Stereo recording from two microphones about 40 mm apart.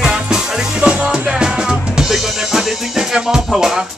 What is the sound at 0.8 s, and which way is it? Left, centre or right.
Music, right.